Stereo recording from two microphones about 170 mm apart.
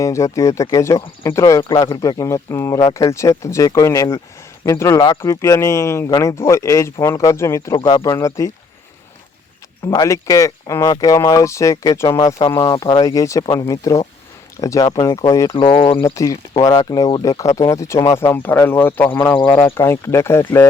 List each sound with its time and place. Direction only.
0.0 s speech: 20° left (ahead or behind)
9.8 s speech: 20° left (ahead or behind)
15.5 s speech: 30° left (ahead or behind)
16.0 s speech: 15° left (ahead or behind)